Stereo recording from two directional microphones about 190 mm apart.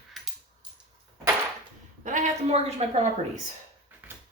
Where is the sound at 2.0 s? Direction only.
40° right (ahead or behind).